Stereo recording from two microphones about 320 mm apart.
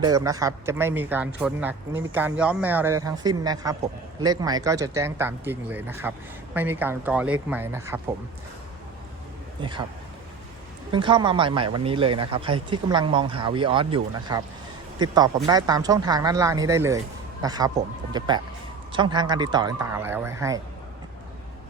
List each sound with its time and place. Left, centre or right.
0.0 s speech: centre
9.6 s a man's voice: centre
10.9 s a man's voice: centre